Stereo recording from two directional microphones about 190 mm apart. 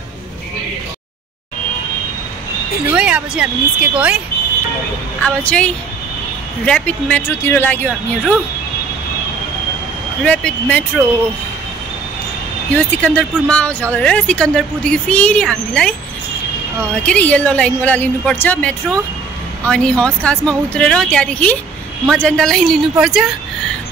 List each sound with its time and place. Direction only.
2.9 s speech: 5° right (ahead or behind)
5.2 s speech: 5° left (ahead or behind)
10.2 s speech: 5° left (ahead or behind)
12.7 s speech: 5° left (ahead or behind)
17.0 s speech: 5° left (ahead or behind)